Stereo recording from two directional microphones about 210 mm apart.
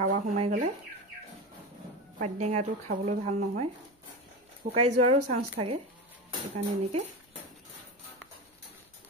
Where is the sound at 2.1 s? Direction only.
35° right (ahead or behind).